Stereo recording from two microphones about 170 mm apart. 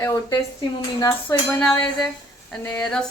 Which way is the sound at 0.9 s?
20° left (ahead or behind).